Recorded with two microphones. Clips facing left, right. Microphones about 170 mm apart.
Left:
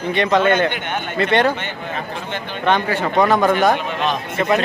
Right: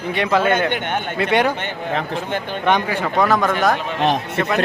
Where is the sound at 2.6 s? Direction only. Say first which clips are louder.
Left 1 dB; 15° right (ahead or behind).